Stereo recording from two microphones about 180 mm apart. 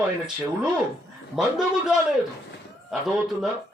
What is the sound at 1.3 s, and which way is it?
Speech, centre (ahead or behind).